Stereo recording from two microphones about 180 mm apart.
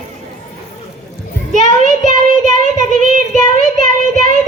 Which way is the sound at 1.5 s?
45° right (ahead or behind).